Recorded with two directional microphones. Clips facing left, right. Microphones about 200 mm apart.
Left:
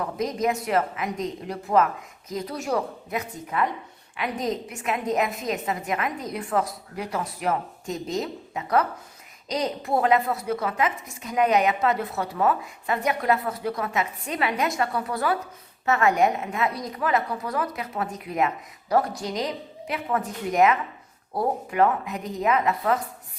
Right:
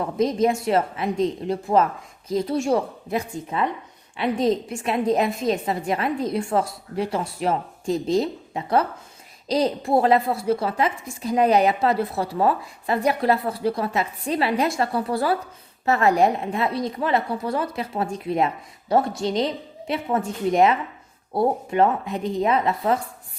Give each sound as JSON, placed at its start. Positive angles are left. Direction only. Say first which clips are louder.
{"t": 0.0, "sound": "a woman's voice", "louder": "right 5 dB", "side_deg": -30}